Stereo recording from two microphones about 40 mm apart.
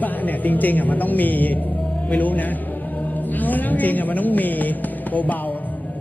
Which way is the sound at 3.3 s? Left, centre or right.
Left.